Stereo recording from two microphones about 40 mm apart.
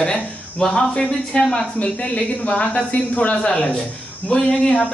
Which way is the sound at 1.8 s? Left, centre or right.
Left.